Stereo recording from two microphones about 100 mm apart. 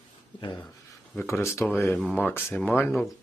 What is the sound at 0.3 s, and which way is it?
Speech, 45° left (ahead or behind).